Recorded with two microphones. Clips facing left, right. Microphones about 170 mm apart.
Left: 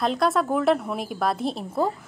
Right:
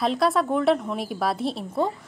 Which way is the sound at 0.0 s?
Centre (ahead or behind).